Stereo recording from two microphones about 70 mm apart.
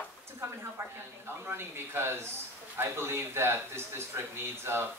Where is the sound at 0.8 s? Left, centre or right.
Right.